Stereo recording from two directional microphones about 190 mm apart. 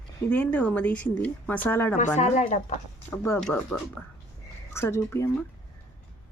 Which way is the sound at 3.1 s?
15° left (ahead or behind).